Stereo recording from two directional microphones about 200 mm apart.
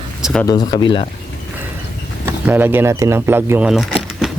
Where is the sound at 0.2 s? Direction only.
Centre (ahead or behind).